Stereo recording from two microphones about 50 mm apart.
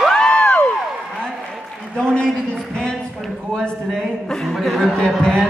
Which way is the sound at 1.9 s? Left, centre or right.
Centre.